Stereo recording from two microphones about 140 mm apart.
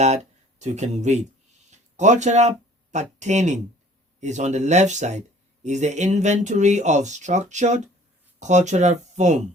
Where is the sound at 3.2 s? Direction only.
55° right (ahead or behind).